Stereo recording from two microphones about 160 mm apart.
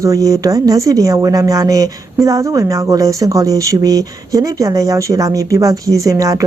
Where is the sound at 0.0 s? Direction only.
20° right (ahead or behind).